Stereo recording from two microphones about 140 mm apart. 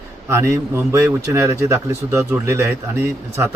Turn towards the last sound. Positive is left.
turn(degrees=-20)  # may be behind; listen again after turning